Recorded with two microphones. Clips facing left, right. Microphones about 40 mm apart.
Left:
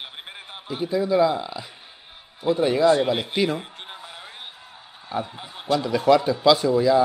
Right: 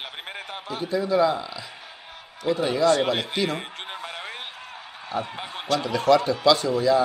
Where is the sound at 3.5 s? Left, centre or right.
Right.